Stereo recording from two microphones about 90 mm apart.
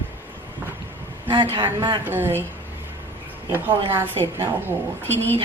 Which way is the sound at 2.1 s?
25° right (ahead or behind).